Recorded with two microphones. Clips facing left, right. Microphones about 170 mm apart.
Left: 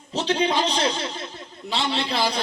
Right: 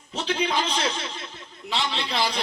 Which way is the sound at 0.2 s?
25° left (ahead or behind).